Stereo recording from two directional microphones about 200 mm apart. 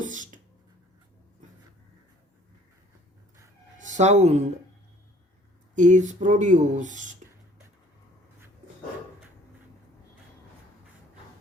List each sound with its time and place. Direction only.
0.0 s a sound: 40° right (ahead or behind)
3.8 s speech: 35° right (ahead or behind)
5.7 s speech: 35° right (ahead or behind)